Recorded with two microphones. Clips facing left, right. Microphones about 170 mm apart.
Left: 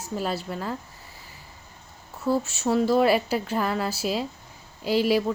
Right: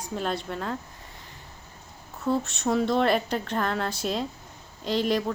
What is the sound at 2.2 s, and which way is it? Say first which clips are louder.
A woman's voice: left 2 dB; 5° left (ahead or behind).